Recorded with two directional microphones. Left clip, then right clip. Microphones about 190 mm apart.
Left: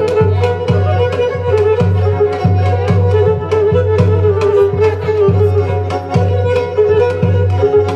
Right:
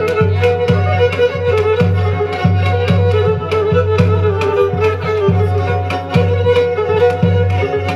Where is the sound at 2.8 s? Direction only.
20° right (ahead or behind).